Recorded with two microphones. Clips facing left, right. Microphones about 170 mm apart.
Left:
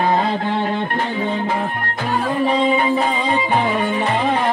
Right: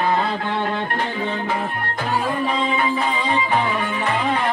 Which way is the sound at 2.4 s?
25° left (ahead or behind).